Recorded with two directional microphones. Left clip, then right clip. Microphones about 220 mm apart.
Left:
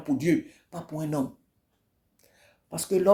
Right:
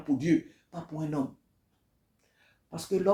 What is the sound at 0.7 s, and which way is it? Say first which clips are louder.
Speech: left 3 dB; 40° left (ahead or behind).